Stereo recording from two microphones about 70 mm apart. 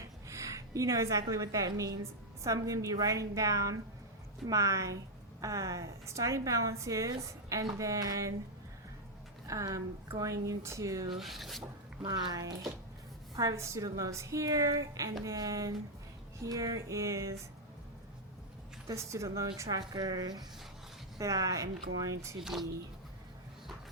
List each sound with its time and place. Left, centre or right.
0.3 s a woman's voice: right
9.5 s a woman's voice: right
11.2 s speech: centre
12.0 s speech: right
13.3 s a woman's voice: right
18.9 s a woman's voice: right
19.9 s speech: right
21.2 s a woman's voice: right
22.4 s speech: centre